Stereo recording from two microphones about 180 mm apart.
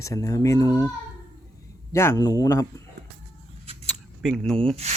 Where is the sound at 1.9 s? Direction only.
15° left (ahead or behind).